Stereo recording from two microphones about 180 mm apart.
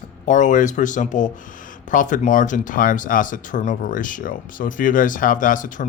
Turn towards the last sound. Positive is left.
turn(degrees=45)  # may be behind; listen again after turning